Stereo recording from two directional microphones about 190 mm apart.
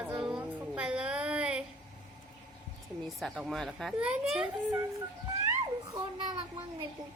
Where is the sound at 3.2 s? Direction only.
Centre (ahead or behind).